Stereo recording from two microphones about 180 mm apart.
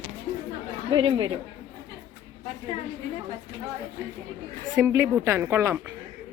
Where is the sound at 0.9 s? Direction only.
30° right (ahead or behind).